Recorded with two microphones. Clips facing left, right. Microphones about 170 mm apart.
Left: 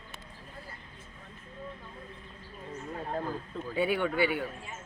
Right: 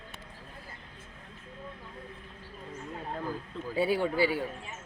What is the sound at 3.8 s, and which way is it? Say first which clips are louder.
Speech: right 1 dB; 35° right (ahead or behind).